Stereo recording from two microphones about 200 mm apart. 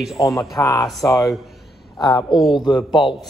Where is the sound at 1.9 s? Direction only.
20° left (ahead or behind).